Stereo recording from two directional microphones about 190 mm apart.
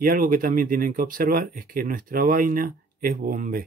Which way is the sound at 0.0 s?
50° right (ahead or behind).